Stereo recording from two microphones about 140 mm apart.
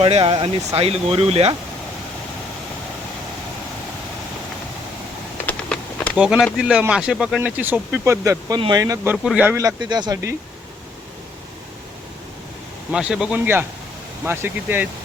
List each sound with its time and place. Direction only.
0.0 s speech: 40° right (ahead or behind)
5.5 s a sound: 10° left (ahead or behind)
6.1 s speech: 5° right (ahead or behind)
7.5 s speech: 15° right (ahead or behind)
9.1 s speech: centre (ahead or behind)
9.4 s speech: 20° right (ahead or behind)
12.9 s speech: 5° right (ahead or behind)